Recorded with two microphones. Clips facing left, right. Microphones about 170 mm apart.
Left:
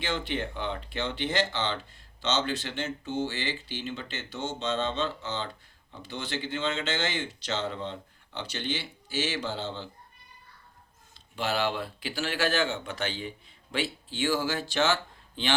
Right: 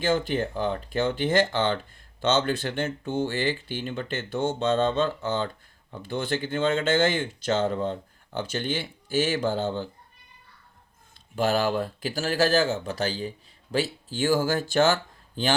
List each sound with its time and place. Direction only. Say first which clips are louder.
0.0 s speech: right 7 dB; 45° right (ahead or behind)
11.3 s speech: right 5 dB; 45° right (ahead or behind)